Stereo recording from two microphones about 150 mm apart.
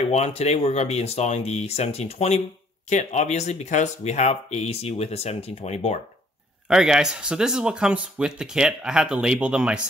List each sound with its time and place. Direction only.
0.0 s speech: 45° left (ahead or behind)
6.7 s speech: 5° right (ahead or behind)